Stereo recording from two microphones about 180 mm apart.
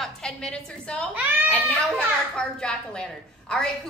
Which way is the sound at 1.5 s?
10° left (ahead or behind).